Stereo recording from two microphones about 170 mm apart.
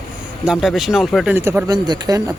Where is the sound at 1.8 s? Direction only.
25° right (ahead or behind).